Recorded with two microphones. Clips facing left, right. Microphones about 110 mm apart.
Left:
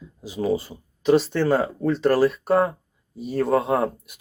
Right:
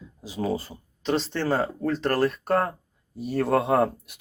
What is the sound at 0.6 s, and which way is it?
Speech, 10° left (ahead or behind).